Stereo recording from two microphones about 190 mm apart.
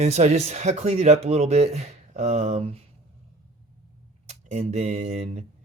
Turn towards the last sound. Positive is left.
turn(degrees=-35)  # may be behind; listen again after turning